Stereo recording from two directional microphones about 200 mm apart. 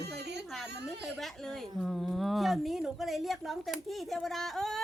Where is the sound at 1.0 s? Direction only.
Centre (ahead or behind).